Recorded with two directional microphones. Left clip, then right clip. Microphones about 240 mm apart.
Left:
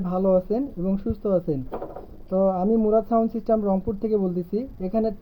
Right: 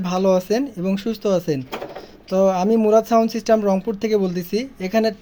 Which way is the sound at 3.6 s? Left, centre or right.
Right.